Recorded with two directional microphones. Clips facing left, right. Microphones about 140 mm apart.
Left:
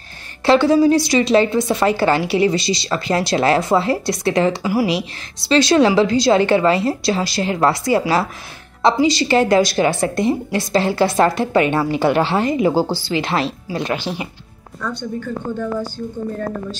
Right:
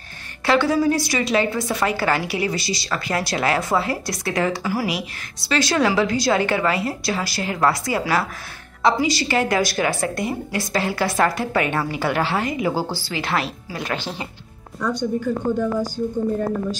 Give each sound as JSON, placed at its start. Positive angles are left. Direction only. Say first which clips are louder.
{"t": 0.5, "sound": "a woman's voice", "louder": "left 6 dB", "side_deg": 25}
{"t": 13.9, "sound": "speech", "louder": "left 4 dB", "side_deg": 15}
{"t": 14.8, "sound": "a woman's voice", "louder": "right 3 dB", "side_deg": -15}